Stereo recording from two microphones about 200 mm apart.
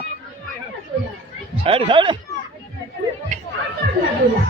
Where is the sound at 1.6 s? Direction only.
25° right (ahead or behind).